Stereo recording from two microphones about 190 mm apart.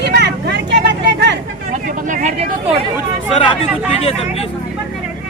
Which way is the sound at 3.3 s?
30° left (ahead or behind).